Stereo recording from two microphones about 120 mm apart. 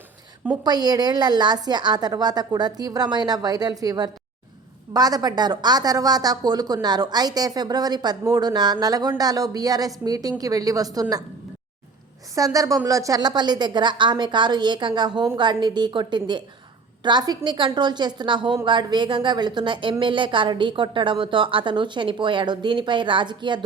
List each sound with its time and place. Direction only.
0.6 s a woman's voice: 35° right (ahead or behind)
12.3 s a woman's voice: 30° right (ahead or behind)